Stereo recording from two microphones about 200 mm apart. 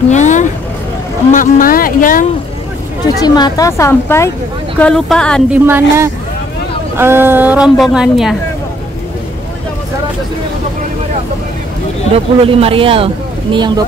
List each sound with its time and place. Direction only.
0.1 s vehicle: 35° left (ahead or behind)
1.3 s speech: 45° left (ahead or behind)
3.2 s a woman's voice: 20° left (ahead or behind); by 5.4 s 5° left (ahead or behind)
5.5 s a woman's voice: 10° right (ahead or behind)
12.1 s speech: 30° right (ahead or behind)